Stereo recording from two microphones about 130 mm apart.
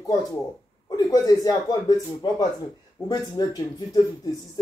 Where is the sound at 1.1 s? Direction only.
30° left (ahead or behind).